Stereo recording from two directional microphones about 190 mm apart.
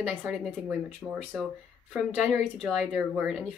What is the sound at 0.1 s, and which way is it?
A woman's voice, 5° right (ahead or behind).